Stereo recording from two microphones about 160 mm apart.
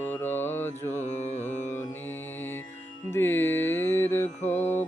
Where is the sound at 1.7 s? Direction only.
15° left (ahead or behind).